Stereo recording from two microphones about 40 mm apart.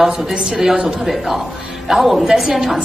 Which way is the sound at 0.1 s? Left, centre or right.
Centre.